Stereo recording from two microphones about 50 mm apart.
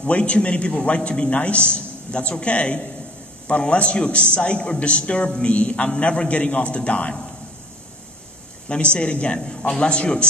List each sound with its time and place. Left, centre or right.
0.0 s a man's voice: left
8.6 s a man's voice: left